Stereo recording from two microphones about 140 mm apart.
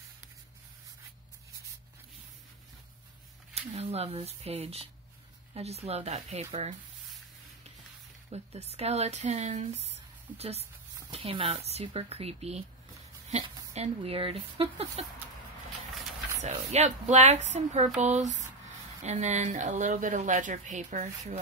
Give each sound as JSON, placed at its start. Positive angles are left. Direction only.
{"t": 3.5, "sound": "speech", "side_deg": -50}
{"t": 8.3, "sound": "speech", "side_deg": -50}
{"t": 16.3, "sound": "a woman's voice", "side_deg": -55}